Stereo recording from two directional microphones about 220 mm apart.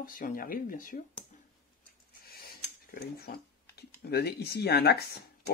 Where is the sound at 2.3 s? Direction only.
45° left (ahead or behind).